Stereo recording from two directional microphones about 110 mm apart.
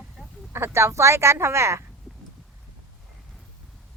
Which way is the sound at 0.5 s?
25° right (ahead or behind).